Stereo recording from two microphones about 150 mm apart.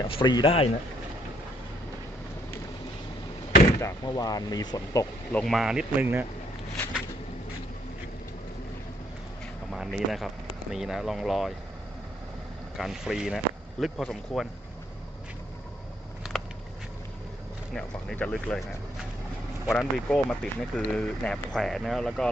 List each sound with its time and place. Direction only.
0.1 s speech: 30° left (ahead or behind)
3.8 s speech: 25° left (ahead or behind)
5.3 s speech: 5° left (ahead or behind); by 6.2 s 10° right (ahead or behind)
9.7 s speech: centre (ahead or behind)
12.7 s speech: centre (ahead or behind)
16.2 s a sound: centre (ahead or behind)
17.7 s speech: 5° left (ahead or behind)
19.8 s speech: 5° left (ahead or behind)